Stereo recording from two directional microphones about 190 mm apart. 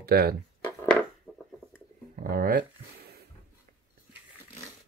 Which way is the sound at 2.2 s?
50° right (ahead or behind).